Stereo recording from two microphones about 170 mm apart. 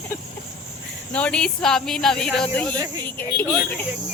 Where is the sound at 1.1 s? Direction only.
5° left (ahead or behind).